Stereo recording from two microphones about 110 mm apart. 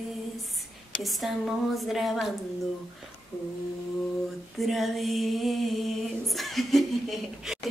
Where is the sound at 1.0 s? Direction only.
Centre (ahead or behind).